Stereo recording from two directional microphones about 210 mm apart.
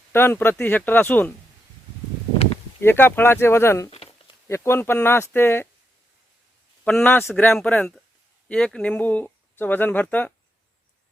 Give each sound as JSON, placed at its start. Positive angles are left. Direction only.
{"t": 0.1, "sound": "speech", "side_deg": 10}
{"t": 2.8, "sound": "speech", "side_deg": 10}
{"t": 3.8, "sound": "a sound", "side_deg": 30}
{"t": 4.4, "sound": "speech", "side_deg": 10}
{"t": 6.8, "sound": "speech", "side_deg": 5}